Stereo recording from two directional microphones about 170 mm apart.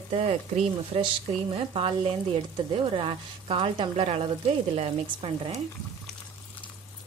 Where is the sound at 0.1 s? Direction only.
35° right (ahead or behind).